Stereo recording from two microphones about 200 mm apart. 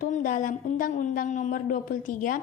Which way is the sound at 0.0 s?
40° left (ahead or behind).